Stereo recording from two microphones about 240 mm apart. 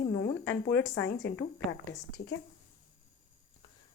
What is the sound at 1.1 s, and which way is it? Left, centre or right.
Speech, left.